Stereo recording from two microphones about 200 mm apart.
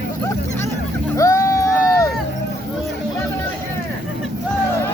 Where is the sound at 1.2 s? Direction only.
15° left (ahead or behind).